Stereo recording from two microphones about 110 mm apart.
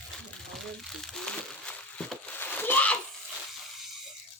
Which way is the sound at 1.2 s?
10° left (ahead or behind).